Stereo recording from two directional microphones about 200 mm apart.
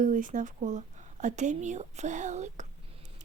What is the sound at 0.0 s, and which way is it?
Speech, 40° right (ahead or behind).